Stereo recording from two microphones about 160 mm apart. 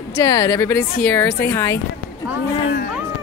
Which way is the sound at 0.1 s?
20° left (ahead or behind).